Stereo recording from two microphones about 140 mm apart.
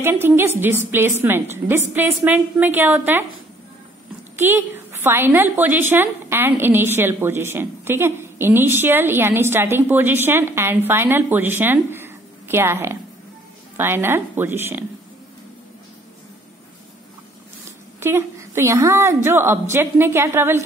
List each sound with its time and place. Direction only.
0.0 s a woman's voice: 15° right (ahead or behind)
4.4 s a woman's voice: 15° right (ahead or behind)
18.0 s a woman's voice: 15° right (ahead or behind)